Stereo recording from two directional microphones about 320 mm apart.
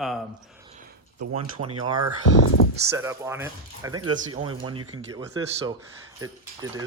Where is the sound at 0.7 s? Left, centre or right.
Right.